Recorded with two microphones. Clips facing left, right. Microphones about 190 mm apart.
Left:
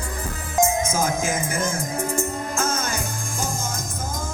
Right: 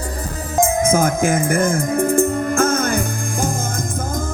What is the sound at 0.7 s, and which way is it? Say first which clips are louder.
Music: right 6 dB; 55° right (ahead or behind).